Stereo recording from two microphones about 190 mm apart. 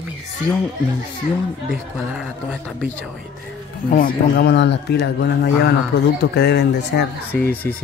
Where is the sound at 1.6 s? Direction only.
Centre (ahead or behind).